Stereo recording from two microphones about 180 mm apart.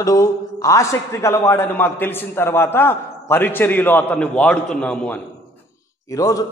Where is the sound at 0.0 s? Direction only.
20° left (ahead or behind).